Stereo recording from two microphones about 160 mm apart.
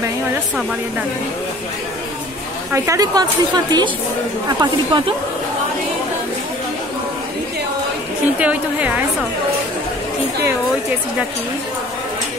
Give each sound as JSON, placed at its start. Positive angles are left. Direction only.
{"t": 2.7, "sound": "a woman's voice", "side_deg": -20}
{"t": 8.4, "sound": "a woman's voice", "side_deg": -10}